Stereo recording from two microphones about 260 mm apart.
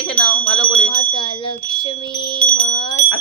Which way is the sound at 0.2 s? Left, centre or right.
Centre.